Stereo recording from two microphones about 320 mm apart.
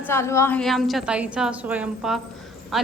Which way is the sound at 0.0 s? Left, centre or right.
Centre.